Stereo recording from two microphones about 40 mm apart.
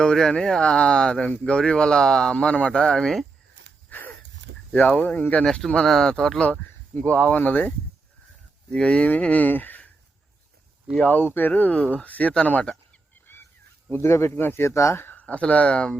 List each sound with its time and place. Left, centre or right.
0.0 s speech: centre
2.9 s speech: centre
3.8 s a sound: left
4.9 s speech: left
5.4 s speech: centre
6.5 s speech: left
8.7 s speech: left
9.2 s speech: left
9.5 s speech: left
11.0 s speech: left
13.9 s speech: left
15.1 s speech: left